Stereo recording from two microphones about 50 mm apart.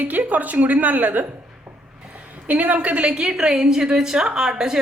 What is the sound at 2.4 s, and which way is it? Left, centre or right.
A woman's voice, right.